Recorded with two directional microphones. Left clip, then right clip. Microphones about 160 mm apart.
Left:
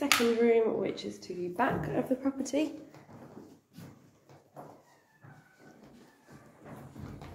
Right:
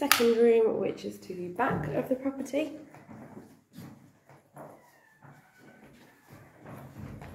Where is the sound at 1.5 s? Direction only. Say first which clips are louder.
Right 1 dB; 10° left (ahead or behind).